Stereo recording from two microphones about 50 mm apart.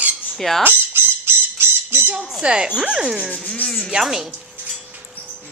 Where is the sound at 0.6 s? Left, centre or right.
Right.